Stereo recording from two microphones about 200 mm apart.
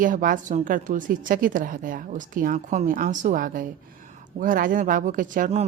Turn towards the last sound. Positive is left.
turn(degrees=-35)  # may be behind; listen again after turning